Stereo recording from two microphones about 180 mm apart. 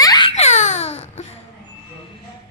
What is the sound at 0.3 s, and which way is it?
Babbling, 40° left (ahead or behind).